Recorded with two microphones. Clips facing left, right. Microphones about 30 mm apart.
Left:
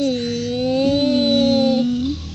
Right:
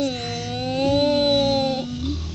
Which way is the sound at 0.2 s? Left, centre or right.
Right.